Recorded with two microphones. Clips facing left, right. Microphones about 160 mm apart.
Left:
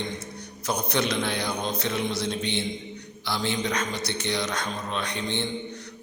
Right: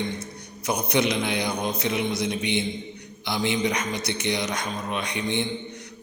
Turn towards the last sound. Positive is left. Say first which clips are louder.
# right 2 dB
turn(degrees=-15)  # may be behind; listen again after turning